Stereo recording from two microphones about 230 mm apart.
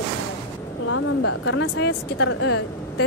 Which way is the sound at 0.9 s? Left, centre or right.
Left.